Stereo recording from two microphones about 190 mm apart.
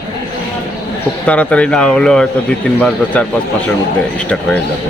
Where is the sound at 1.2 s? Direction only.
5° left (ahead or behind).